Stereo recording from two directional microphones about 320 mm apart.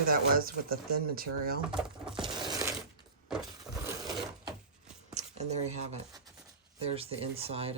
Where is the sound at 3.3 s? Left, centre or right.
Centre.